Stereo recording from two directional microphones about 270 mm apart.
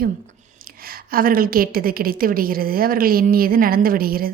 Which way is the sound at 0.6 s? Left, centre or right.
Right.